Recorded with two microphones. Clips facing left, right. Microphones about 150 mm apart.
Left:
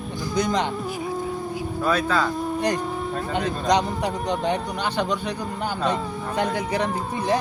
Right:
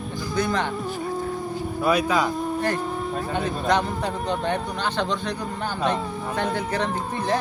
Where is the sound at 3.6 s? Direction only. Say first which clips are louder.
Left 2 dB; 15° left (ahead or behind).